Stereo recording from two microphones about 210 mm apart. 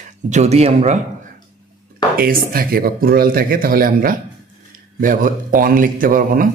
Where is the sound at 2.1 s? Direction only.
45° right (ahead or behind).